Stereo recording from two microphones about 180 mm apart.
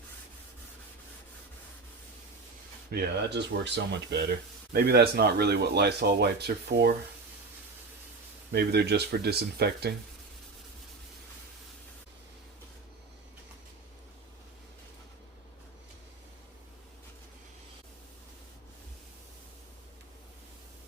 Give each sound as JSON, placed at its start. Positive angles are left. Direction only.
{"t": 2.9, "sound": "speech", "side_deg": -65}
{"t": 4.7, "sound": "speech", "side_deg": -60}
{"t": 8.5, "sound": "speech", "side_deg": -65}